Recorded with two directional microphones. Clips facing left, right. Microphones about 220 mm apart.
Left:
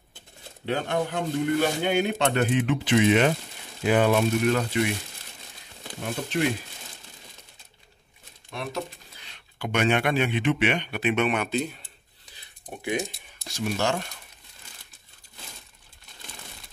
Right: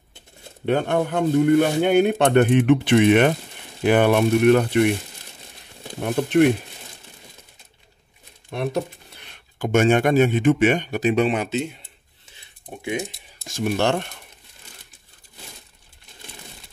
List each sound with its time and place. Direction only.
0.7 s speech: 55° right (ahead or behind)
5.9 s speech: 55° right (ahead or behind)
8.5 s speech: 55° right (ahead or behind); by 13.5 s 20° right (ahead or behind)
13.5 s speech: 55° right (ahead or behind)